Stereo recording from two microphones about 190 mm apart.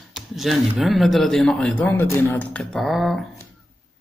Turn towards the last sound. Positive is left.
turn(degrees=0)  # may be behind; listen again after turning